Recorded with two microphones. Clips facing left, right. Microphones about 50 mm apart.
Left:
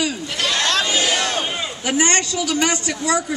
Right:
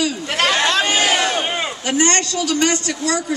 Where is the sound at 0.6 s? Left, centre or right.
Centre.